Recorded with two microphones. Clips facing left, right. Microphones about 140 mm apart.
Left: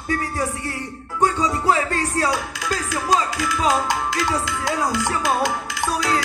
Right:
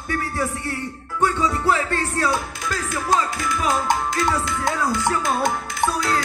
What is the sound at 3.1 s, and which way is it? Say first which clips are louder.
Music: left 1 dB; 50° right (ahead or behind).